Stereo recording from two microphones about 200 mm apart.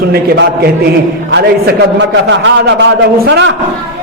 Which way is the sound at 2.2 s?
65° right (ahead or behind).